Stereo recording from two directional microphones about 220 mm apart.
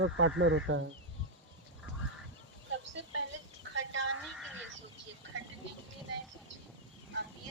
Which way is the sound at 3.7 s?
60° right (ahead or behind).